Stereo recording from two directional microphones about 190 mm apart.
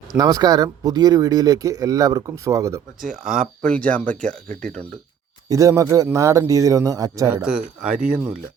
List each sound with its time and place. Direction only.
0.2 s speech: 20° right (ahead or behind)
3.6 s speech: 5° left (ahead or behind)
5.5 s speech: 15° right (ahead or behind)
7.4 s speech: 5° right (ahead or behind)